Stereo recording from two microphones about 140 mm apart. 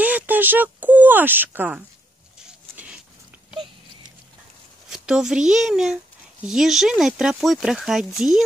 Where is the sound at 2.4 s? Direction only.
5° right (ahead or behind).